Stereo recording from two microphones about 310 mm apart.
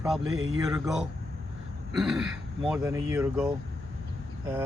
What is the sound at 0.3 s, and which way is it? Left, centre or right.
Speech, right.